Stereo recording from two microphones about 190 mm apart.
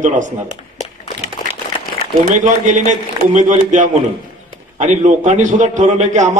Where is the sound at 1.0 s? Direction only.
35° left (ahead or behind).